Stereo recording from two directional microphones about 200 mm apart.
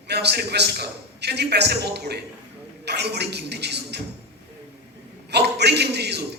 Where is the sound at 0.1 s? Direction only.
55° right (ahead or behind).